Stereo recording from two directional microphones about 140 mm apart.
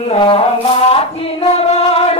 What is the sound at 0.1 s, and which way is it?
Music, 40° left (ahead or behind).